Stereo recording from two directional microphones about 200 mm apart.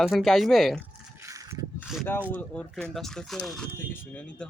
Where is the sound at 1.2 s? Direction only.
15° right (ahead or behind).